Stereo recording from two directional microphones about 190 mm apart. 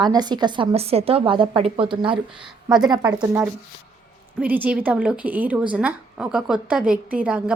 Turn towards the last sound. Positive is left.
turn(degrees=-5)  # may be behind; listen again after turning